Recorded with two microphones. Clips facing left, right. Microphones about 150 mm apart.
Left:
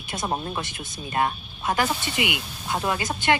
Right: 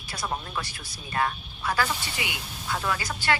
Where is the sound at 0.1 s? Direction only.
25° left (ahead or behind).